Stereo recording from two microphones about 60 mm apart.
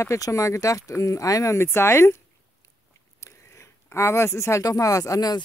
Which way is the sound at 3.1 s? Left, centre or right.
Left.